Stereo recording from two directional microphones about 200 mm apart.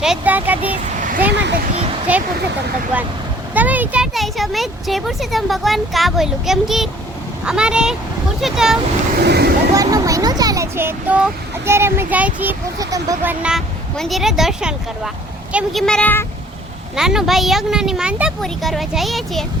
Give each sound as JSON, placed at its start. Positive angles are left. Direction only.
{"t": 0.0, "sound": "speech", "side_deg": -5}
{"t": 0.9, "sound": "a sound", "side_deg": -40}
{"t": 1.3, "sound": "speech", "side_deg": -60}
{"t": 2.1, "sound": "speech", "side_deg": -5}
{"t": 9.2, "sound": "speech", "side_deg": -55}
{"t": 9.7, "sound": "speech", "side_deg": -15}
{"t": 13.4, "sound": "speech", "side_deg": 0}